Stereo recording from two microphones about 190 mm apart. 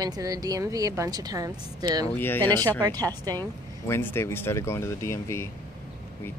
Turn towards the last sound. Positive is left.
turn(degrees=15)  # may be behind; listen again after turning